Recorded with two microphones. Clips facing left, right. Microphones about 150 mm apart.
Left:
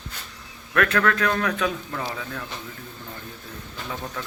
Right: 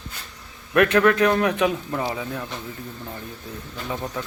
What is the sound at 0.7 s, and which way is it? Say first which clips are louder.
A man's voice: right 5 dB; 20° right (ahead or behind).